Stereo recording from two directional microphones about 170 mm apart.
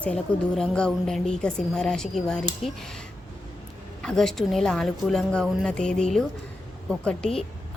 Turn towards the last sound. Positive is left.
turn(degrees=5)  # may be behind; listen again after turning